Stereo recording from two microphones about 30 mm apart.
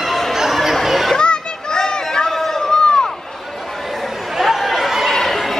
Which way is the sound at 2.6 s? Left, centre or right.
Left.